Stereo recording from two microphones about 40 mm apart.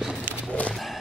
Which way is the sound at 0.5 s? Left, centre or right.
Left.